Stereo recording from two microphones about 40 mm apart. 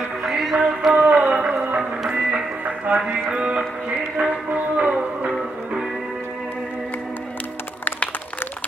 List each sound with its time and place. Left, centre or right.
0.2 s music: centre
0.5 s music: centre
1.0 s a sound: right
1.5 s music: right
2.0 s music: right
3.2 s music: right
4.4 s music: right